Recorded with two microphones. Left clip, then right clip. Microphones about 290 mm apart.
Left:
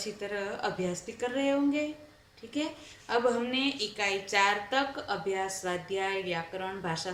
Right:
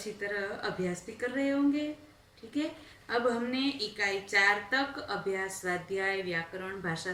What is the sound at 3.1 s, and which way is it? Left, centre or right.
A woman's voice, centre.